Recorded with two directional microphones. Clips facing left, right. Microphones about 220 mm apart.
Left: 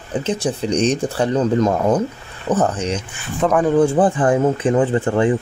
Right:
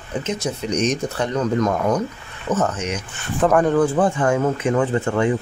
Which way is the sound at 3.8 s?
30° left (ahead or behind).